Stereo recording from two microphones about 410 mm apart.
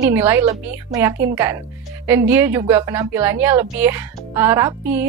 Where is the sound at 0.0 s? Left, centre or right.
Centre.